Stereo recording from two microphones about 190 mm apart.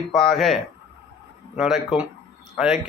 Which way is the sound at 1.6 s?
Centre (ahead or behind).